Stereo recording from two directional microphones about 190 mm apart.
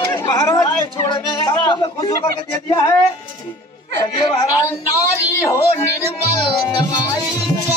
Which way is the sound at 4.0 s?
25° left (ahead or behind).